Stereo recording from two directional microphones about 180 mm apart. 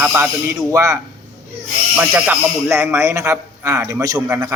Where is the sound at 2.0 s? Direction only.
5° right (ahead or behind).